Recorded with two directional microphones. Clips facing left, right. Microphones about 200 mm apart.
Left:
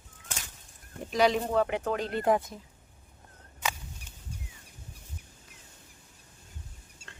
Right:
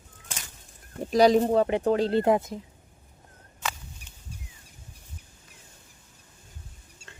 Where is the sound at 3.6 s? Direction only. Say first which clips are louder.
Even; 10° left (ahead or behind).